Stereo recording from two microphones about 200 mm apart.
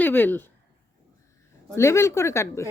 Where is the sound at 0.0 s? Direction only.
10° left (ahead or behind).